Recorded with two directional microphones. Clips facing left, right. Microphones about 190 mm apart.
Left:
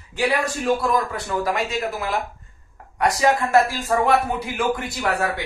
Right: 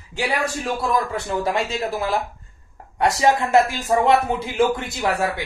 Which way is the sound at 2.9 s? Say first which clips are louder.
Right 1 dB; 25° right (ahead or behind).